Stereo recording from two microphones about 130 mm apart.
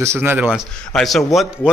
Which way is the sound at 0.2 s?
10° right (ahead or behind).